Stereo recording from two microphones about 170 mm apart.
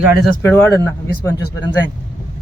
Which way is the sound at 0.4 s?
15° left (ahead or behind).